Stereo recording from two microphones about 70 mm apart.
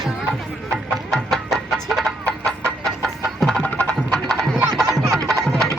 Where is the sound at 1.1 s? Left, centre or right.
Centre.